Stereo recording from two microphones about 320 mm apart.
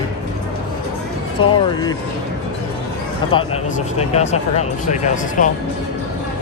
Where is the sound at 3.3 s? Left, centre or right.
Centre.